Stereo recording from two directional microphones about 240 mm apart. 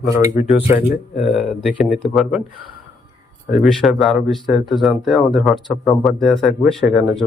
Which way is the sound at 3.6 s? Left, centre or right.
Centre.